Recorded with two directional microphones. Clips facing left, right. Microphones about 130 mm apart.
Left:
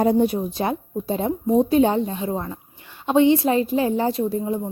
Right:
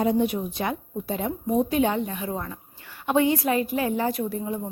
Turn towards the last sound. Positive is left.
turn(degrees=25)  # may be behind; listen again after turning